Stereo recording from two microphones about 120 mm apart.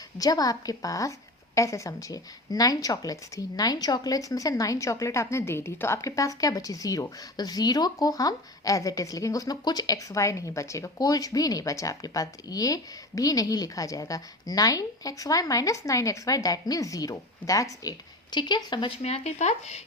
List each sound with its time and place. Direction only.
0.2 s a woman's voice: 30° left (ahead or behind)
19.0 s speech: 65° left (ahead or behind)